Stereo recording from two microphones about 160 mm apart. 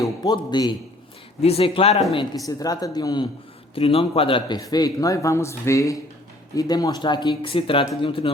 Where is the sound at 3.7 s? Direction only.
35° left (ahead or behind).